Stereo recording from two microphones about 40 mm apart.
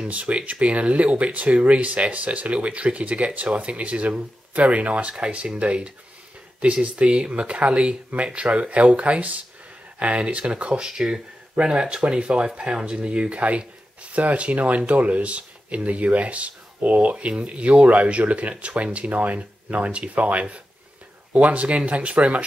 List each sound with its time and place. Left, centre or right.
0.0 s speech: right
10.9 s speech: centre; by 22.4 s right